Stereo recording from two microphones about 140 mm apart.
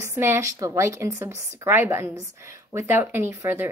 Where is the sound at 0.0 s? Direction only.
15° right (ahead or behind).